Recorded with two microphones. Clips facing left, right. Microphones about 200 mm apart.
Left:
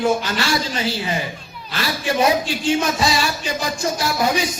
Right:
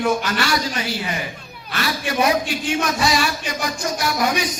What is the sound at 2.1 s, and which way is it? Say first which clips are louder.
Speech: left 2 dB; 25° left (ahead or behind).